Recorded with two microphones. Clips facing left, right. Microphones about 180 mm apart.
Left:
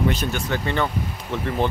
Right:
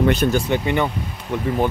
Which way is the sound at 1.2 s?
5° right (ahead or behind).